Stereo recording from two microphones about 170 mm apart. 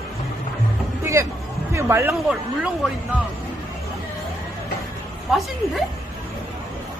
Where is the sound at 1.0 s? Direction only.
15° right (ahead or behind).